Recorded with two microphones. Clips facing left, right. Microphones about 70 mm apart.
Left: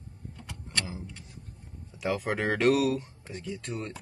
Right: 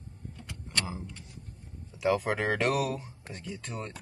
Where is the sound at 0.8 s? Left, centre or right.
Centre.